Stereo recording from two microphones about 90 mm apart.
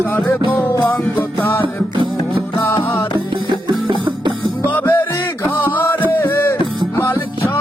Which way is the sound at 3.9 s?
60° right (ahead or behind).